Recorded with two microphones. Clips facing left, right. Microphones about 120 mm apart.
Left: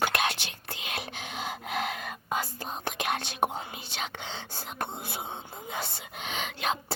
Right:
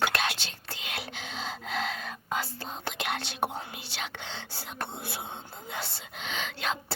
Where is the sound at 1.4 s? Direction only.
15° left (ahead or behind).